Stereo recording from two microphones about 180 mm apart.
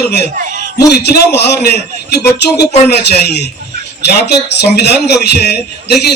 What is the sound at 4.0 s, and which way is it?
A man's voice, 65° left (ahead or behind).